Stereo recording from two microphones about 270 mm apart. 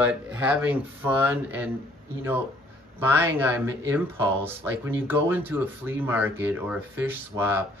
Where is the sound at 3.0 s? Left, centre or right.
Centre.